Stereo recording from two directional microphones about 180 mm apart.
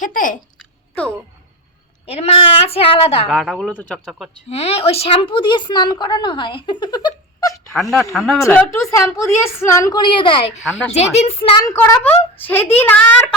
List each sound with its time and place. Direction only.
0.0 s speech: 45° left (ahead or behind)
2.0 s a woman's voice: 35° left (ahead or behind)
3.2 s speech: centre (ahead or behind)
4.4 s speech: 35° left (ahead or behind)
7.7 s speech: centre (ahead or behind)
8.4 s a woman's voice: 15° left (ahead or behind); by 11.5 s 35° left (ahead or behind)
11.6 s a woman's voice: 15° left (ahead or behind)